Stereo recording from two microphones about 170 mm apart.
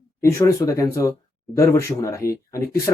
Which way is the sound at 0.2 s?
15° left (ahead or behind).